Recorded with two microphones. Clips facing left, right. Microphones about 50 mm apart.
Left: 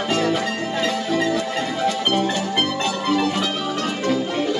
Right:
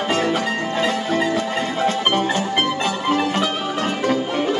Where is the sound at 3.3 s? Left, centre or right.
Right.